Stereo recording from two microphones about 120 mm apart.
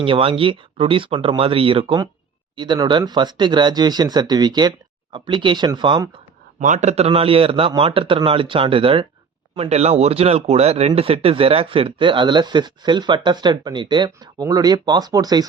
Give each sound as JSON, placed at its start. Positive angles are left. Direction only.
{"t": 0.0, "sound": "speech", "side_deg": -50}
{"t": 6.6, "sound": "speech", "side_deg": -85}
{"t": 9.6, "sound": "speech", "side_deg": -60}